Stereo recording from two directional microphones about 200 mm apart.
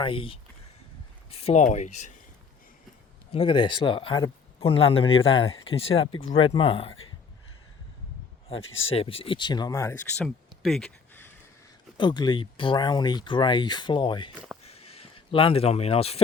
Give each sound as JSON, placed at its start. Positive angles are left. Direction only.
{"t": 0.0, "sound": "speech", "side_deg": 25}
{"t": 3.3, "sound": "speech", "side_deg": 25}
{"t": 8.9, "sound": "speech", "side_deg": 30}
{"t": 10.2, "sound": "a sound", "side_deg": 0}
{"t": 11.9, "sound": "speech", "side_deg": 20}
{"t": 14.3, "sound": "speech", "side_deg": -5}
{"t": 14.6, "sound": "a sound", "side_deg": 30}